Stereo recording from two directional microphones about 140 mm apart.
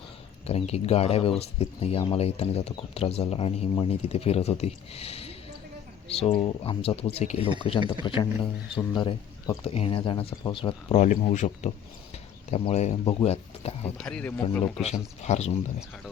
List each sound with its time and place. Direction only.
0.4 s speech: 50° left (ahead or behind)
10.9 s speech: 60° left (ahead or behind)
14.0 s speech: 10° left (ahead or behind)
15.2 s speech: 55° left (ahead or behind)